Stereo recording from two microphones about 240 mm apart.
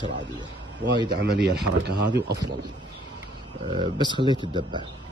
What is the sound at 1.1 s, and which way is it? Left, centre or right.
Speech, right.